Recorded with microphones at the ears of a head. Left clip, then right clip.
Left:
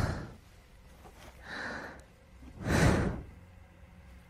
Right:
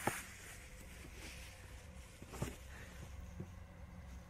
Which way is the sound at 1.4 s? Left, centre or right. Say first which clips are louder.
Left 18 dB; left.